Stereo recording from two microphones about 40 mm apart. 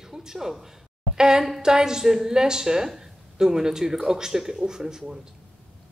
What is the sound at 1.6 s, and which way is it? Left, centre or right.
A woman's voice, centre.